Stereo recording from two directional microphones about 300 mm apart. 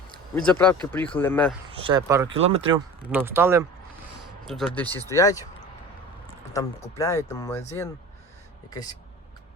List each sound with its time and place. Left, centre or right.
0.5 s speech: centre
1.7 s speech: centre
3.0 s speech: centre
6.5 s speech: centre